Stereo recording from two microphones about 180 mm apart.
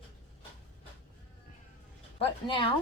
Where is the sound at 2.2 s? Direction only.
30° left (ahead or behind).